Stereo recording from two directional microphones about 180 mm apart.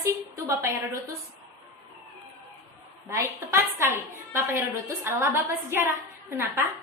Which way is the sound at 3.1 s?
15° right (ahead or behind).